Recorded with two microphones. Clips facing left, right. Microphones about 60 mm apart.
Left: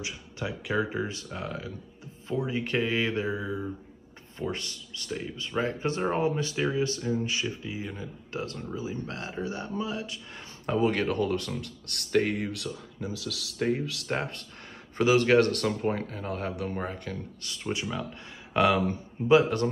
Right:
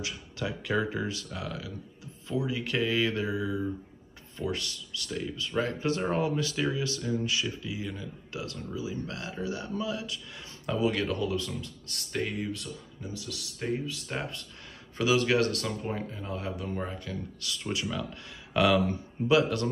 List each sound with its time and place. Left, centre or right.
0.0 s speech: left
10.7 s speech: left
14.1 s speech: left
15.0 s speech: left
17.4 s speech: left